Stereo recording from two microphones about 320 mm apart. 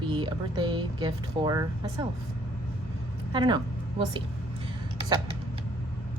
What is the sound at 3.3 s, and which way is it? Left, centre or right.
Speech, centre.